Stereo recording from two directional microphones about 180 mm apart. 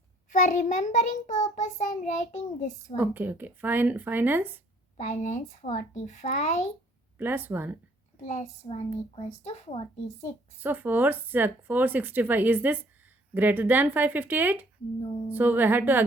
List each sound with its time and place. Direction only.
0.3 s a woman's voice: 45° left (ahead or behind)
3.0 s speech: 10° right (ahead or behind)
4.9 s a woman's voice: 40° left (ahead or behind)
7.2 s speech: 10° right (ahead or behind)
8.3 s a woman's voice: 35° left (ahead or behind)
10.6 s speech: 10° right (ahead or behind)